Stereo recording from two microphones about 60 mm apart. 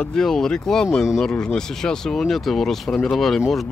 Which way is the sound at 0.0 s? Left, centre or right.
Centre.